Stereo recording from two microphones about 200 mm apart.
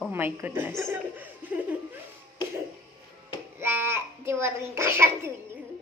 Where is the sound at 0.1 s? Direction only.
10° right (ahead or behind).